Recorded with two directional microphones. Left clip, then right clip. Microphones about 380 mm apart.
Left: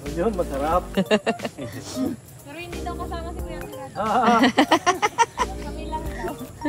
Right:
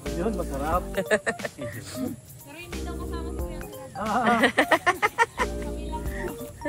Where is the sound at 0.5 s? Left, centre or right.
Centre.